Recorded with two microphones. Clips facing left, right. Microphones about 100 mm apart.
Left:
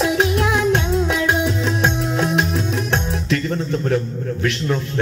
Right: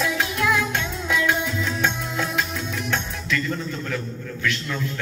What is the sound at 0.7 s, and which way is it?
Music, 25° left (ahead or behind).